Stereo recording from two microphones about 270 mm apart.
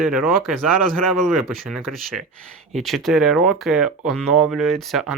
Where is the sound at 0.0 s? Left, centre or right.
Centre.